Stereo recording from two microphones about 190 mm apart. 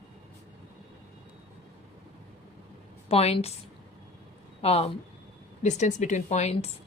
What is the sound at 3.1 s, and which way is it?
Speech, 30° left (ahead or behind).